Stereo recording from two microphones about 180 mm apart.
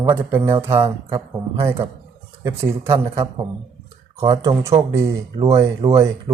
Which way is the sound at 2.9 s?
30° right (ahead or behind).